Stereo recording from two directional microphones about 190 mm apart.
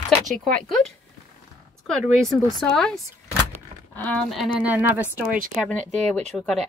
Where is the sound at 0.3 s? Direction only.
Centre (ahead or behind).